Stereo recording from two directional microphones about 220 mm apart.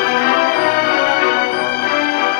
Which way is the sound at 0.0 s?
40° left (ahead or behind).